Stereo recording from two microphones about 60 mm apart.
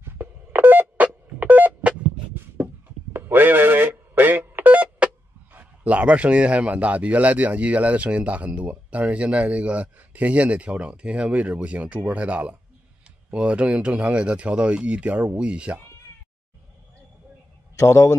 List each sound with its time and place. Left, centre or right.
0.0 s telephone dialing: right
2.5 s a sound: right
5.5 s speech: right
17.7 s a man's voice: left